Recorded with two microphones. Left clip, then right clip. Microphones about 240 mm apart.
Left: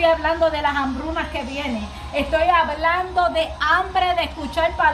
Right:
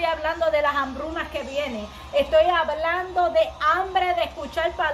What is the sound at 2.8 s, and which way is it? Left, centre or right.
A woman's voice, right.